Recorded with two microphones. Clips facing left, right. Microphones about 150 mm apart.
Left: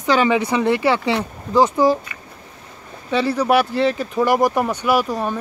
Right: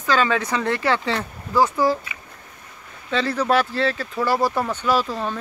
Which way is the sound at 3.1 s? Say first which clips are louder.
Left 3 dB; 10° left (ahead or behind).